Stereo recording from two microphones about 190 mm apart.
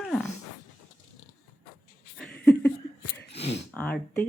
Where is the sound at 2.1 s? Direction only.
5° left (ahead or behind).